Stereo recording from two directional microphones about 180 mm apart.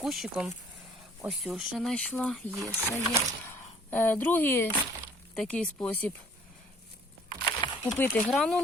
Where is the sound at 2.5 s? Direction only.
15° right (ahead or behind).